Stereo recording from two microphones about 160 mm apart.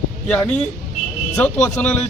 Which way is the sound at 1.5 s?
10° left (ahead or behind).